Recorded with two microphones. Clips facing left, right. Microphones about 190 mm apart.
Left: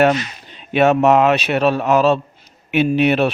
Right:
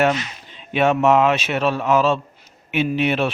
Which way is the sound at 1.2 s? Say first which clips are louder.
Left 4 dB; 60° left (ahead or behind).